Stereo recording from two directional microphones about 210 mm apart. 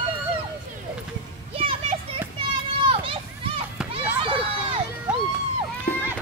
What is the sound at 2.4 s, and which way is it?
Children playing, 25° right (ahead or behind).